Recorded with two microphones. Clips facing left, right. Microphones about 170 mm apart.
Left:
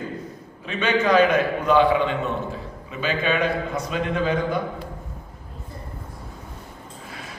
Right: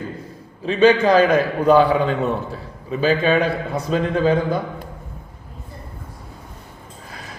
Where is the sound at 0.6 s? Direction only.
35° right (ahead or behind).